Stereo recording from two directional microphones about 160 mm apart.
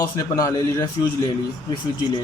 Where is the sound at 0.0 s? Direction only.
20° left (ahead or behind).